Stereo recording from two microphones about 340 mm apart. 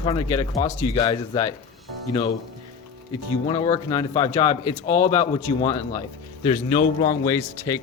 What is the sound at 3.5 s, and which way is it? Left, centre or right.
Speech, centre.